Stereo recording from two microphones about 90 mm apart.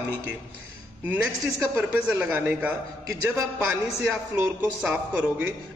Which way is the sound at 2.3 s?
20° right (ahead or behind).